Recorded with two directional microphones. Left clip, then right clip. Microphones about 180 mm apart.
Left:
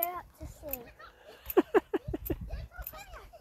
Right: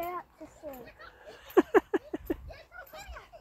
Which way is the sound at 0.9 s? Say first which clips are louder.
Right 2 dB; 5° left (ahead or behind).